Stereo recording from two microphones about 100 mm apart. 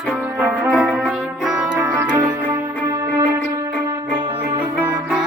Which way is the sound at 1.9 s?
25° right (ahead or behind).